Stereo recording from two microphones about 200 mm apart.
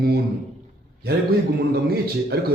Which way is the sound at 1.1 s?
50° right (ahead or behind).